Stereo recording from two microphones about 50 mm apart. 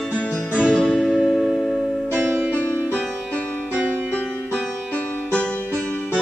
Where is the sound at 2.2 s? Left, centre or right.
Right.